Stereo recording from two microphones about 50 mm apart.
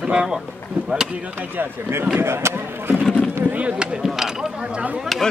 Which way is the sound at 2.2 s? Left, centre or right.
Right.